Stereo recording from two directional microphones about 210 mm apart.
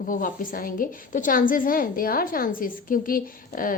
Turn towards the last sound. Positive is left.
turn(degrees=40)  # may be behind; listen again after turning